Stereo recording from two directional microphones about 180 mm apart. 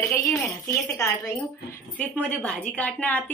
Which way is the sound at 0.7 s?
15° left (ahead or behind).